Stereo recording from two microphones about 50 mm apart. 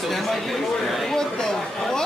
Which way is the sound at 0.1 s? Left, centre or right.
Centre.